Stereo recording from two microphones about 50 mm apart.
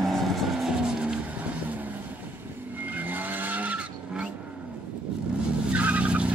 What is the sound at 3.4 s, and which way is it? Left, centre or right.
Vehicle, right.